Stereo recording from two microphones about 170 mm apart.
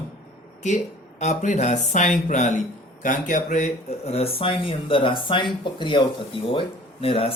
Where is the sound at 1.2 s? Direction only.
45° left (ahead or behind).